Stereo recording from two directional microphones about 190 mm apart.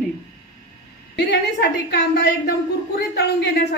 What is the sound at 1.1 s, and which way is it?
A woman's voice, 60° left (ahead or behind).